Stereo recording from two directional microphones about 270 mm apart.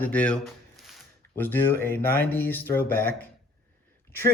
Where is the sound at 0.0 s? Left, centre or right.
Centre.